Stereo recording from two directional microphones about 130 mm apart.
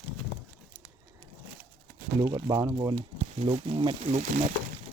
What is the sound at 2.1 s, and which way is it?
Speech, 30° right (ahead or behind).